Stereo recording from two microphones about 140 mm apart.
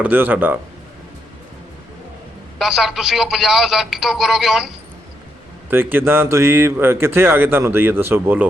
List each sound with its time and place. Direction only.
0.0 s speech: 15° right (ahead or behind)
2.6 s speech: centre (ahead or behind)
5.7 s speech: 15° right (ahead or behind)